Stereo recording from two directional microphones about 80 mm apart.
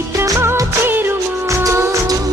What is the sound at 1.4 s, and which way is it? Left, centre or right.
Music, right.